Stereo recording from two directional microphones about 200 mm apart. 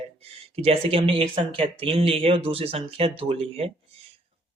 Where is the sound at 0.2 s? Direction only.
30° right (ahead or behind).